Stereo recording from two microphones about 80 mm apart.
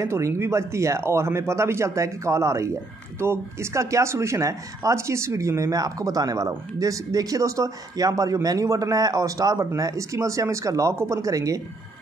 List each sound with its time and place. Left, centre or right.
0.0 s a man's voice: right